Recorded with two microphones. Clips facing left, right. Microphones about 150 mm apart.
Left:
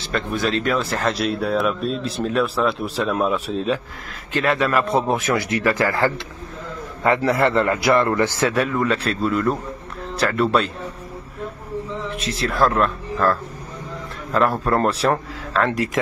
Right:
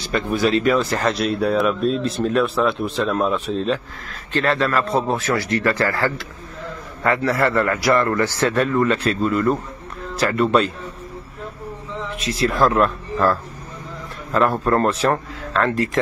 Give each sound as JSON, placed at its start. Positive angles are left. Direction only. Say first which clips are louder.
{"t": 0.0, "sound": "a man's voice", "louder": "right 3 dB", "side_deg": 0}
{"t": 8.5, "sound": "speech", "louder": "right 2 dB", "side_deg": 5}
{"t": 12.2, "sound": "speech", "louder": "right 2 dB", "side_deg": 0}
{"t": 14.6, "sound": "speech", "louder": "right 1 dB", "side_deg": 5}